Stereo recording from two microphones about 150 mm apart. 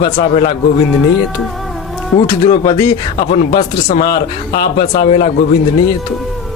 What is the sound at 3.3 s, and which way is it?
Speech, 45° left (ahead or behind).